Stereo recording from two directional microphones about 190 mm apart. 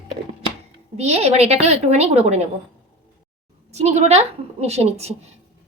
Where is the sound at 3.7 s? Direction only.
35° right (ahead or behind).